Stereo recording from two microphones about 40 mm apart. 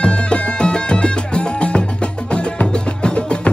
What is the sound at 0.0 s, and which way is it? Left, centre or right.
Music, left.